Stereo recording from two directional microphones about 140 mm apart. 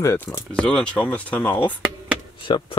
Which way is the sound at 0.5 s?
5° left (ahead or behind).